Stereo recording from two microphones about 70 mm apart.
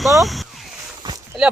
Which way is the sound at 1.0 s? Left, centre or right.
Right.